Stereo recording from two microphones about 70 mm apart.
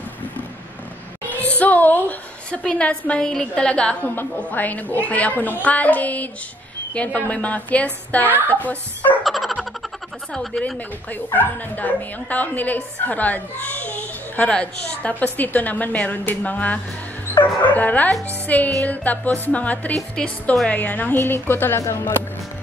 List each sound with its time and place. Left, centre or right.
1.3 s music: left
2.5 s a woman's voice: centre
9.2 s a sound: centre
10.3 s speech: centre
11.3 s a woman's voice: left